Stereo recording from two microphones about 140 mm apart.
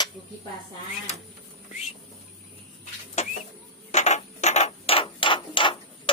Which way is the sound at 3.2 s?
50° left (ahead or behind).